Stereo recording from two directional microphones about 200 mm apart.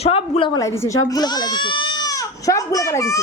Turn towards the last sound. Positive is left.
turn(degrees=15)  # may be behind; listen again after turning